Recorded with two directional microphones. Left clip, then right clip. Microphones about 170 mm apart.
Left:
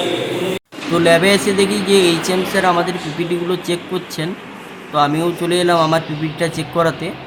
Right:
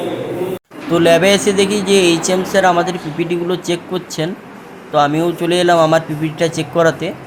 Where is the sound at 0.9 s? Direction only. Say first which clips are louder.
Right 2 dB; 10° right (ahead or behind).